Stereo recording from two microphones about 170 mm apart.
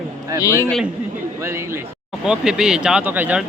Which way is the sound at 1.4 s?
15° right (ahead or behind).